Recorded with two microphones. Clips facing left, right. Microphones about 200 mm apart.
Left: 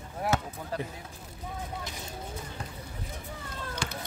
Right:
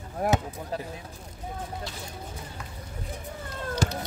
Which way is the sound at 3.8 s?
40° right (ahead or behind).